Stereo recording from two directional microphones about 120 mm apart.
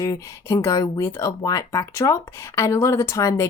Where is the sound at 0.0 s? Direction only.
25° left (ahead or behind).